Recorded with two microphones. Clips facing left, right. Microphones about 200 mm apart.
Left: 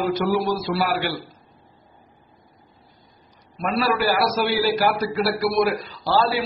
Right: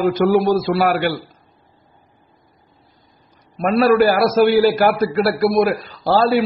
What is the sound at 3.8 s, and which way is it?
A man's voice, 55° right (ahead or behind).